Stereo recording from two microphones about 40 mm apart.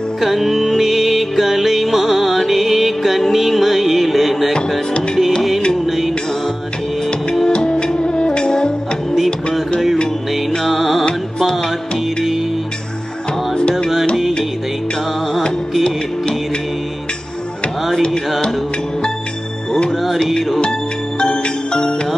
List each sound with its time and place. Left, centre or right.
0.2 s music: centre
5.9 s music: centre
7.4 s music: left
10.6 s music: centre
13.6 s music: left
21.2 s music: left